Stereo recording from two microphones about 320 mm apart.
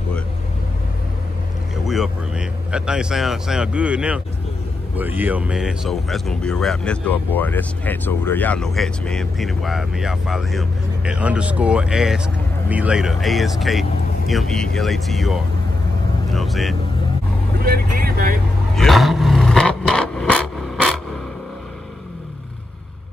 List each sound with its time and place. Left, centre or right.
1.9 s speech: centre
17.6 s speech: right
18.8 s vehicle: centre